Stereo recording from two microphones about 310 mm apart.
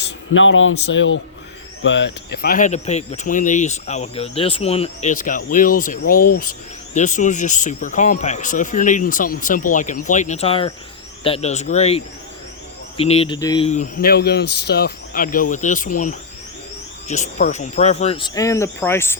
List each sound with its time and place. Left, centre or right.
0.3 s a man's voice: left; by 19.1 s centre